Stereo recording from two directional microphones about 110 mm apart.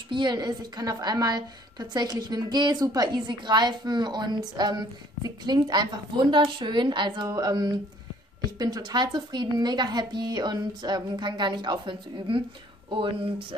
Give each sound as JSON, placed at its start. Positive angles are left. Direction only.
{"t": 0.1, "sound": "a woman's voice", "side_deg": -40}